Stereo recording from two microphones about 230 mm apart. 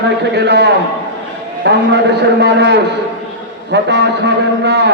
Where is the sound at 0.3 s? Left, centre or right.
Right.